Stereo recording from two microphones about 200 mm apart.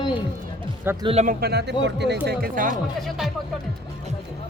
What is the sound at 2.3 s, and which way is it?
Speech, 45° right (ahead or behind).